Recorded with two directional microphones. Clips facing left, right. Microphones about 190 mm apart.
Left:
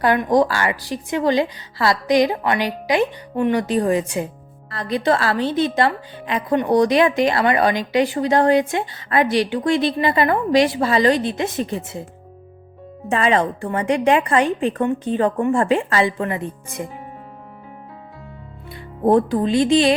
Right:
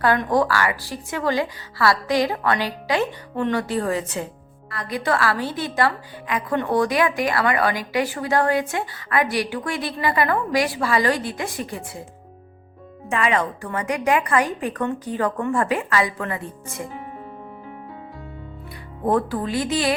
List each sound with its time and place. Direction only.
0.0 s a woman's voice: 15° left (ahead or behind)
4.7 s a woman's voice: 25° left (ahead or behind)
13.1 s a woman's voice: 30° left (ahead or behind)
19.0 s a woman's voice: 25° left (ahead or behind)